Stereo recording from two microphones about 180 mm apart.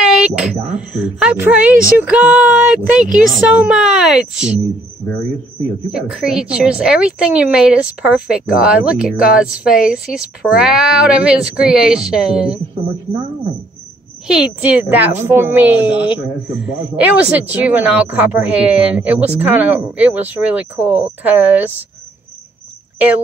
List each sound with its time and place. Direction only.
0.0 s a woman's voice: 5° right (ahead or behind)
5.9 s a woman's voice: 5° right (ahead or behind)
14.2 s a woman's voice: 5° right (ahead or behind)